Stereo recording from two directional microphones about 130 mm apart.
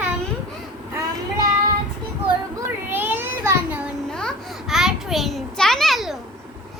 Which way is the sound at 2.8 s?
15° right (ahead or behind).